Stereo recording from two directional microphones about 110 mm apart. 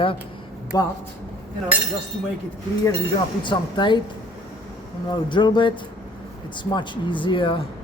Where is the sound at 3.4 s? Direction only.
45° left (ahead or behind).